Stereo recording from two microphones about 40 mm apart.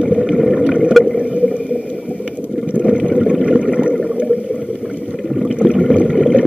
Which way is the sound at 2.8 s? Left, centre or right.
Right.